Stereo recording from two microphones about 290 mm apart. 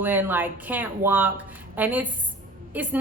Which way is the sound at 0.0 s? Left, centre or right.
Centre.